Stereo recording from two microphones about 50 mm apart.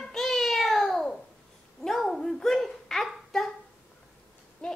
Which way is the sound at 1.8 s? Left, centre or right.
Centre.